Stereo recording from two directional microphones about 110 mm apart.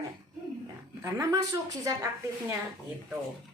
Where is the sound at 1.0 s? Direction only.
25° right (ahead or behind).